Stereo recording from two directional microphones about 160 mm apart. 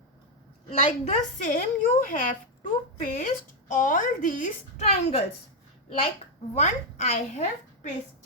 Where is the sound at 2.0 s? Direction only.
60° left (ahead or behind).